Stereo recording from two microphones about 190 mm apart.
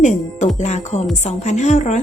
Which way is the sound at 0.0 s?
40° left (ahead or behind).